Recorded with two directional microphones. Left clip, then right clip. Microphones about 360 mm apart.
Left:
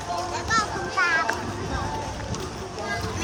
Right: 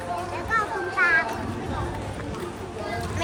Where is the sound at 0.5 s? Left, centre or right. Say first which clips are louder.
Even; centre.